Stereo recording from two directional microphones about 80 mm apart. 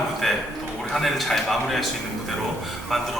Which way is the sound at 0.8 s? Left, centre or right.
Centre.